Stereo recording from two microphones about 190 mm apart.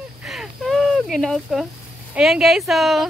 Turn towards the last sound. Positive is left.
turn(degrees=0)  # may be behind; listen again after turning